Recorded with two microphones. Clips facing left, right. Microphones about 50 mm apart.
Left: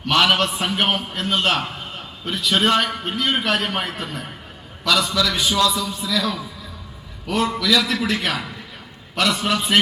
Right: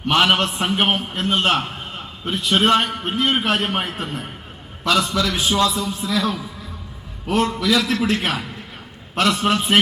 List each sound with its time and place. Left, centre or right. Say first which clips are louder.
0.0 s a man's voice: right 1 dB; right